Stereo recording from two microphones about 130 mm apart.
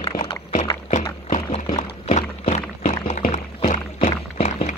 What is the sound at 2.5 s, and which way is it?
Music, 65° left (ahead or behind).